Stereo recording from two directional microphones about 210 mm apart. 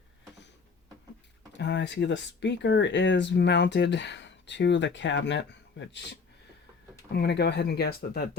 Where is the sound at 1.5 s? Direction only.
55° left (ahead or behind).